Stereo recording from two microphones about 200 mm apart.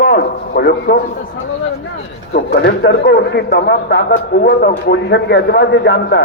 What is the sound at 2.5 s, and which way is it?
A man's voice, 55° left (ahead or behind).